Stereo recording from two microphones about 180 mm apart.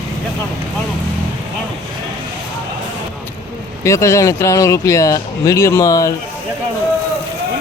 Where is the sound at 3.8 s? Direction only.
15° left (ahead or behind).